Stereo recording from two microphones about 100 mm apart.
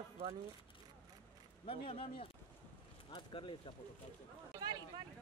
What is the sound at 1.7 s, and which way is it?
Speech, 70° left (ahead or behind).